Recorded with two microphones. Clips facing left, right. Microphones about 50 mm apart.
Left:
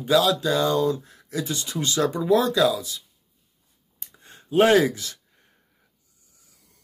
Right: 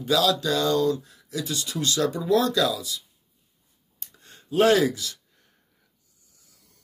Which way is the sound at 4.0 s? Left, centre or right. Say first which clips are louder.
Left 2 dB; left.